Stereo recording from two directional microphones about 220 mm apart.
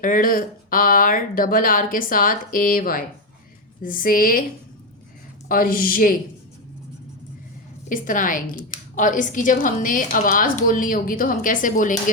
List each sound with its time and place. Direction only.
0.0 s a woman's voice: 40° left (ahead or behind)
5.5 s a woman's voice: 40° left (ahead or behind)
7.9 s a woman's voice: 35° left (ahead or behind)